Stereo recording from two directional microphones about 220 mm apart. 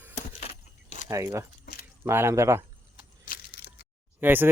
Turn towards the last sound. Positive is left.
turn(degrees=-10)  # may be behind; listen again after turning